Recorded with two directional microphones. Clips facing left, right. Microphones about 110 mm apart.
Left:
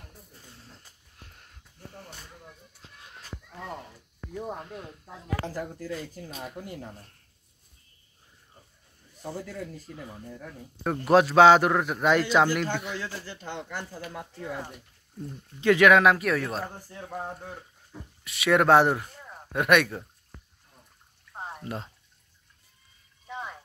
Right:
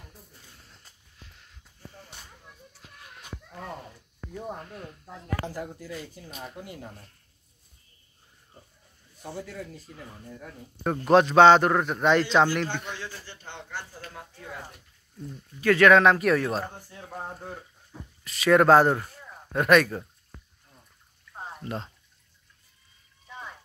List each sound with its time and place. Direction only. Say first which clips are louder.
1.1 s a sound: left 1 dB; 50° left (ahead or behind)
1.8 s a sound: left 1 dB; 60° left (ahead or behind)
4.6 s speech: left 1 dB; 20° left (ahead or behind)
5.5 s speech: left 1 dB; 20° right (ahead or behind)
9.9 s a man's voice: left 2 dB; 10° left (ahead or behind)
15.6 s a man's voice: right 1 dB; 15° left (ahead or behind)
18.2 s a man's voice: right 3 dB; 5° left (ahead or behind)
21.6 s a man's voice: right 3 dB; 5° left (ahead or behind)